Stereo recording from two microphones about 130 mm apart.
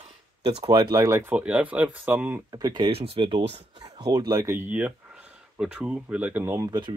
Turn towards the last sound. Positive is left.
turn(degrees=-20)  # may be behind; listen again after turning